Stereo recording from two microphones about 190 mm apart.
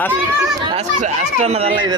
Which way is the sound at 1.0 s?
35° right (ahead or behind).